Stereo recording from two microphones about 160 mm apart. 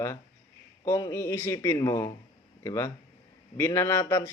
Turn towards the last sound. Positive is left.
turn(degrees=15)  # may be behind; listen again after turning